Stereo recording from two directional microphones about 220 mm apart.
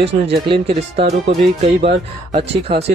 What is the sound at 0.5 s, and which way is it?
Speech, 25° right (ahead or behind).